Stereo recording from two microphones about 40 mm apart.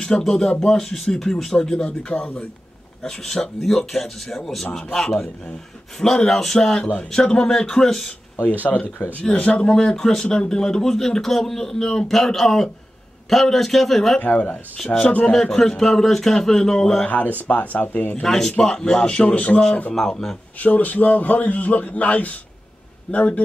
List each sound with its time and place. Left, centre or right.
0.2 s a man's voice: centre
1.9 s speech: left
3.0 s a man's voice: centre
8.6 s a man's voice: left
9.3 s a man's voice: left; by 10.2 s centre
10.2 s speech: left
10.5 s a man's voice: centre
14.2 s a man's voice: left
15.3 s a man's voice: centre
17.5 s speech: left
18.2 s a man's voice: centre
19.0 s a man's voice: left
19.9 s a man's voice: centre
20.5 s a man's voice: left